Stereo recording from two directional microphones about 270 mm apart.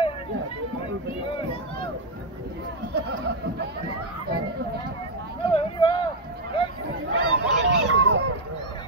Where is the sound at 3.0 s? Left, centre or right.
Right.